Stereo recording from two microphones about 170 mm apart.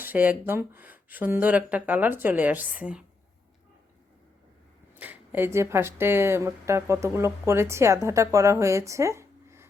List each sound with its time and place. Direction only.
0.0 s speech: 10° right (ahead or behind)
4.9 s speech: 10° right (ahead or behind)